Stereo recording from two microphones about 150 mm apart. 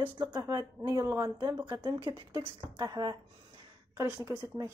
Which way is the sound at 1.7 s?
30° right (ahead or behind).